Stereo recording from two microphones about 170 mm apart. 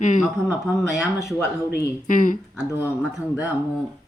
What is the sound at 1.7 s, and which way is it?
Speech, 55° left (ahead or behind).